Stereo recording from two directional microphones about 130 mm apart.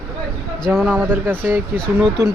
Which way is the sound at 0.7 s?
5° right (ahead or behind).